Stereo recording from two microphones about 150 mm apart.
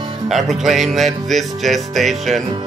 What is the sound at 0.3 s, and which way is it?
Music, centre (ahead or behind).